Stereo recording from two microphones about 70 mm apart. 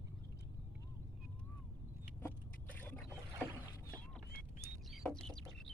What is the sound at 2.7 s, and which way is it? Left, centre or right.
Boat, left.